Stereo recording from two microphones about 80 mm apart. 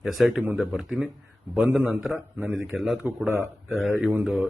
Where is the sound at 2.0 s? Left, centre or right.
Centre.